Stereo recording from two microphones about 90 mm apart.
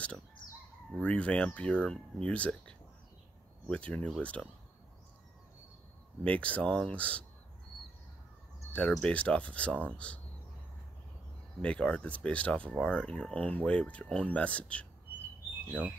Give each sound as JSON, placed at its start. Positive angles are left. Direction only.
{"t": 1.0, "sound": "speech", "side_deg": 15}
{"t": 6.2, "sound": "speech", "side_deg": 15}
{"t": 8.9, "sound": "speech", "side_deg": 10}
{"t": 11.6, "sound": "speech", "side_deg": 10}